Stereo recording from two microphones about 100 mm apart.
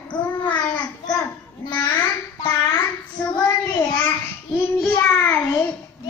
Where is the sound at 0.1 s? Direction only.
50° left (ahead or behind).